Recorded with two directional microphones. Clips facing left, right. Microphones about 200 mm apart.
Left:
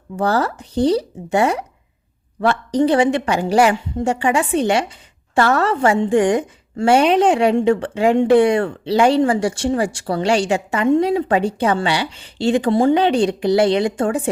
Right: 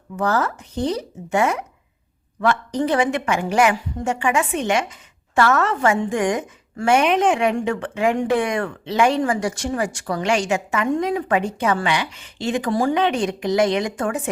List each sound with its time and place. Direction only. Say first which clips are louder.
0.2 s a woman's voice: left 3 dB; 35° left (ahead or behind)